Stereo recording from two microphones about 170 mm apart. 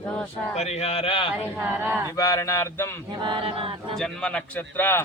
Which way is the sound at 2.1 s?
20° left (ahead or behind).